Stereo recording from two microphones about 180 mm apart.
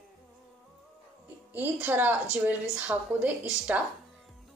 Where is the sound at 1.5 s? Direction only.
10° right (ahead or behind).